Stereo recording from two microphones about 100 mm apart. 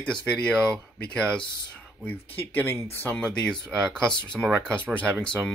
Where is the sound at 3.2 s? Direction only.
10° left (ahead or behind).